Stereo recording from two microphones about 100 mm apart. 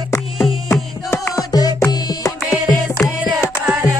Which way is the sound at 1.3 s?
40° left (ahead or behind).